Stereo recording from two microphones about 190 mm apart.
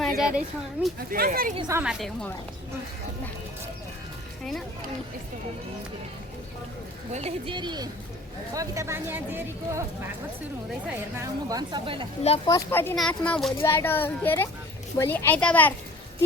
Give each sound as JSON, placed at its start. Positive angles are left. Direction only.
{"t": 0.0, "sound": "a sound", "side_deg": 0}
{"t": 1.3, "sound": "a woman's voice", "side_deg": -45}
{"t": 1.5, "sound": "a woman's voice", "side_deg": -20}
{"t": 1.8, "sound": "a woman's voice", "side_deg": -5}
{"t": 7.1, "sound": "a woman's voice", "side_deg": -35}
{"t": 10.8, "sound": "a woman's voice", "side_deg": -15}
{"t": 12.5, "sound": "a child's voice", "side_deg": 15}